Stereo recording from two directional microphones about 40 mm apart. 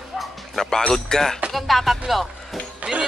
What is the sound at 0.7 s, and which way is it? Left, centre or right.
Speech, centre.